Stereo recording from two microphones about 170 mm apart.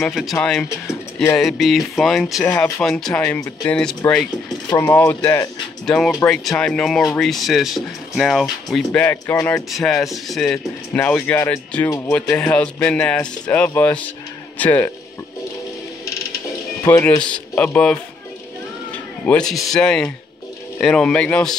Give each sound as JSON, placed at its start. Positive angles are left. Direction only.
{"t": 0.0, "sound": "speech", "side_deg": 0}
{"t": 0.7, "sound": "speech", "side_deg": 15}
{"t": 1.4, "sound": "speech", "side_deg": 0}
{"t": 4.6, "sound": "speech", "side_deg": 15}
{"t": 9.7, "sound": "speech", "side_deg": 0}
{"t": 16.8, "sound": "speech", "side_deg": 15}
{"t": 19.2, "sound": "speech", "side_deg": 5}